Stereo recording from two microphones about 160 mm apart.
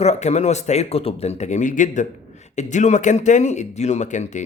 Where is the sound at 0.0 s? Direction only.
45° left (ahead or behind).